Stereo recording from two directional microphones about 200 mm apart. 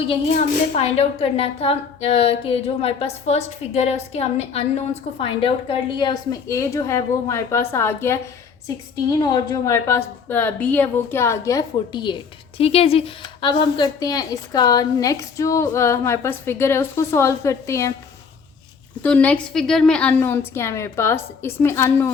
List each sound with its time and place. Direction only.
0.1 s a woman's voice: 30° left (ahead or behind); by 17.9 s 15° left (ahead or behind)
19.0 s a woman's voice: 5° left (ahead or behind)